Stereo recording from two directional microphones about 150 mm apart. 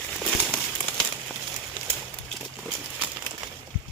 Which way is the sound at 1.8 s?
35° right (ahead or behind).